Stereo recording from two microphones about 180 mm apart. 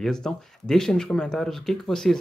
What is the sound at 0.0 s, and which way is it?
Speech, 5° left (ahead or behind).